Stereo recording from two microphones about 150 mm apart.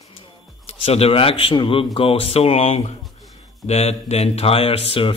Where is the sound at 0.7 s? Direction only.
40° left (ahead or behind).